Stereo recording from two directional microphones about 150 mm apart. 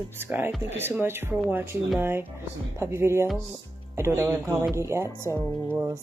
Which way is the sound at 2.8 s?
15° right (ahead or behind).